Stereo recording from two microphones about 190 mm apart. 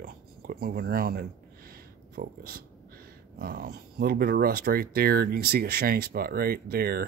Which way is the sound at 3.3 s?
50° right (ahead or behind).